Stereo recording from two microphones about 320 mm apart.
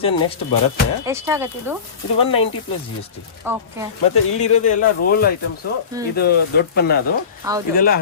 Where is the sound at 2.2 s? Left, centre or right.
Centre.